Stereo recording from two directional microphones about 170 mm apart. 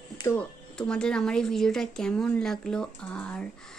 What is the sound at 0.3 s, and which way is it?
Speech, 5° left (ahead or behind).